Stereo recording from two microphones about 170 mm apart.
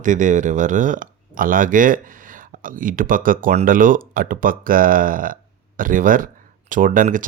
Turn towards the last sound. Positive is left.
turn(degrees=-50)  # may be behind; listen again after turning